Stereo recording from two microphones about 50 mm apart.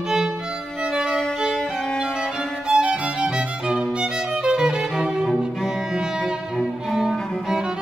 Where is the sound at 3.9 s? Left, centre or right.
Centre.